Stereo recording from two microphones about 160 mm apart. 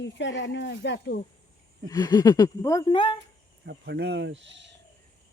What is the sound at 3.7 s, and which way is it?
Speech, 90° right.